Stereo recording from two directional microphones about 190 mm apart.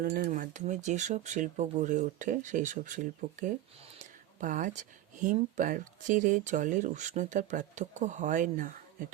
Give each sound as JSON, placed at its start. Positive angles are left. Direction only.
{"t": 0.0, "sound": "speech", "side_deg": -50}